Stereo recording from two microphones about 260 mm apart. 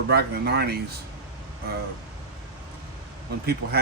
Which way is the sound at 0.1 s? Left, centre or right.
Right.